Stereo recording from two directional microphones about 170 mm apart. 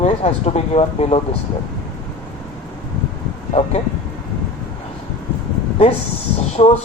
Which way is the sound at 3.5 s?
40° left (ahead or behind).